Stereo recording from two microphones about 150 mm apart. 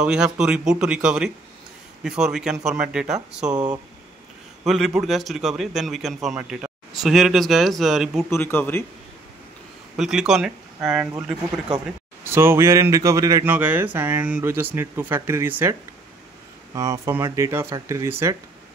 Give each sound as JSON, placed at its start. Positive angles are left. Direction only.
{"t": 0.0, "sound": "a man's voice", "side_deg": -5}
{"t": 3.5, "sound": "speech", "side_deg": -25}
{"t": 4.6, "sound": "a man's voice", "side_deg": 0}
{"t": 8.3, "sound": "speech", "side_deg": 15}
{"t": 9.9, "sound": "a man's voice", "side_deg": 0}
{"t": 16.7, "sound": "speech", "side_deg": -20}